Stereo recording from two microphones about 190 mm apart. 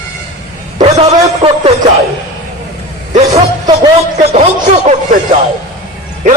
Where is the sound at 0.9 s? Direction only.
35° right (ahead or behind).